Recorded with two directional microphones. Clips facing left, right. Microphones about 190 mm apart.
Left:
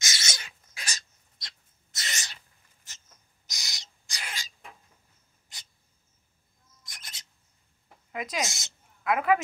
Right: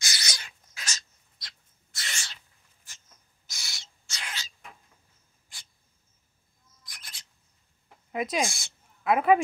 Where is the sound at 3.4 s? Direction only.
20° left (ahead or behind).